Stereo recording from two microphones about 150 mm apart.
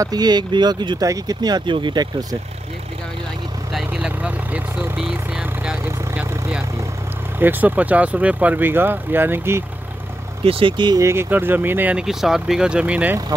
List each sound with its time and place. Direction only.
0.0 s speech: 25° right (ahead or behind)
3.7 s vehicle: 5° right (ahead or behind)
7.3 s speech: 10° right (ahead or behind)
10.4 s speech: 35° right (ahead or behind)
11.0 s speech: 15° right (ahead or behind)